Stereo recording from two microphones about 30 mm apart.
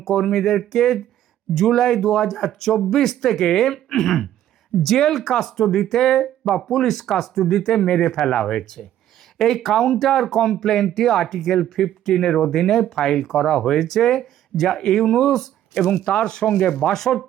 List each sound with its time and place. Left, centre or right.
0.0 s speech: centre
7.9 s speech: left
9.6 s speech: centre
15.7 s speech: left
16.9 s speech: centre